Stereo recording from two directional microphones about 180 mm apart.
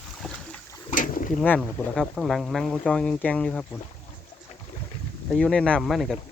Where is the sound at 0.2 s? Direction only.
5° left (ahead or behind).